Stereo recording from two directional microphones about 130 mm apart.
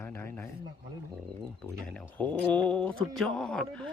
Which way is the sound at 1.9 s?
10° left (ahead or behind).